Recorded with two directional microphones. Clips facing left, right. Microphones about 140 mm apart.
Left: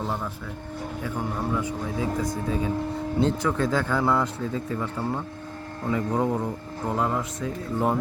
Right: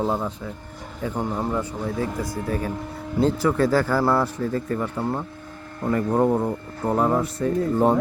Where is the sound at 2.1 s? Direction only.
5° right (ahead or behind).